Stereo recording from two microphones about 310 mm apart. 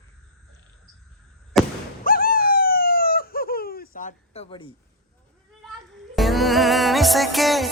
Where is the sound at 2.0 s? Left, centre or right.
Left.